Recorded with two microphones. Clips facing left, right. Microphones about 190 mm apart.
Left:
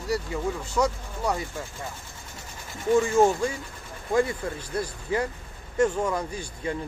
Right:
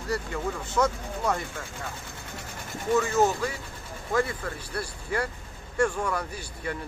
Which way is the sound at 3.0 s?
30° left (ahead or behind).